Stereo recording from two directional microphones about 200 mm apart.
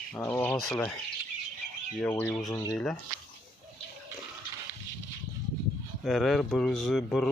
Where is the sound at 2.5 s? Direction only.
20° left (ahead or behind).